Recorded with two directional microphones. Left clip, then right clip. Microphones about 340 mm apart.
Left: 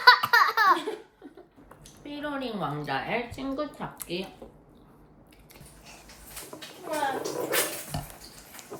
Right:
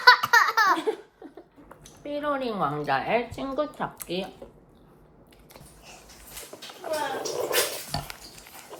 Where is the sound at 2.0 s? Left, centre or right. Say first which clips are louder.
Right 6 dB; centre.